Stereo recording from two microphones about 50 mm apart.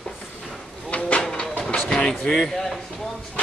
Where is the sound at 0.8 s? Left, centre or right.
Left.